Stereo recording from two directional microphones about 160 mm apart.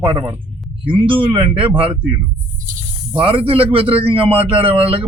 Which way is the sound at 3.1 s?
35° right (ahead or behind).